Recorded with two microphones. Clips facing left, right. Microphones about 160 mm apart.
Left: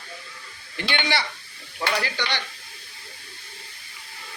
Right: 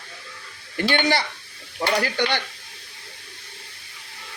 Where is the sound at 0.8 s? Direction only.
45° right (ahead or behind).